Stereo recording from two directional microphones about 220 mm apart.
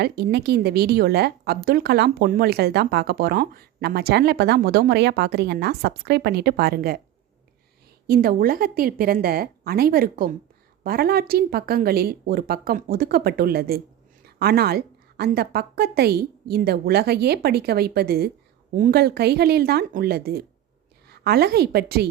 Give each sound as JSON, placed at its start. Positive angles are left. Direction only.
{"t": 0.0, "sound": "speech", "side_deg": -45}
{"t": 8.0, "sound": "a woman's voice", "side_deg": -45}